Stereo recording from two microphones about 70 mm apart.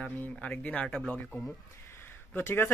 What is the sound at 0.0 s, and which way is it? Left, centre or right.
Speech, centre.